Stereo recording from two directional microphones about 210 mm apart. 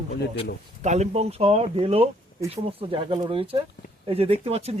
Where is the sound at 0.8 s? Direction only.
30° right (ahead or behind).